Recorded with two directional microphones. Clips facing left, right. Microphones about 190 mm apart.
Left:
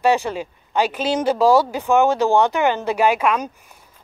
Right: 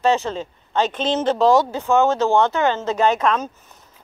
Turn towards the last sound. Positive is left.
turn(degrees=10)  # may be behind; listen again after turning